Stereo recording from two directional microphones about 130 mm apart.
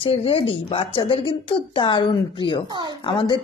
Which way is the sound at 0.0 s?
45° left (ahead or behind).